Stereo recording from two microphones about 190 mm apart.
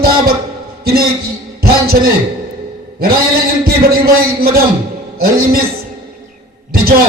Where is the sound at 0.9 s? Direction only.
55° right (ahead or behind).